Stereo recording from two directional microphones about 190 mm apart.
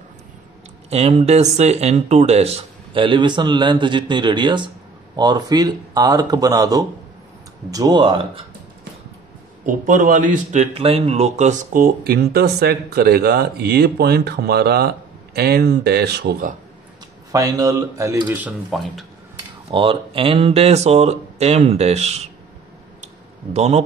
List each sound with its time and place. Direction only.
0.8 s speech: 35° right (ahead or behind)
9.7 s speech: 45° right (ahead or behind)
17.3 s speech: 20° right (ahead or behind)
18.7 s speech: centre (ahead or behind)
19.7 s speech: 30° right (ahead or behind)
23.5 s speech: 35° right (ahead or behind)